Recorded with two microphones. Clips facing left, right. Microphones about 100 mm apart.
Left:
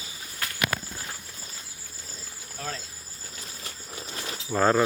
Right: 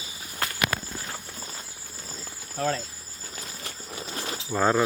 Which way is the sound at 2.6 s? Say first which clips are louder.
Right 9 dB; 50° right (ahead or behind).